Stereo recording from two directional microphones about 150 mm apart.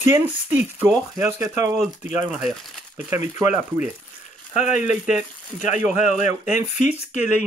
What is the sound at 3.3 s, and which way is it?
Speech, 15° right (ahead or behind).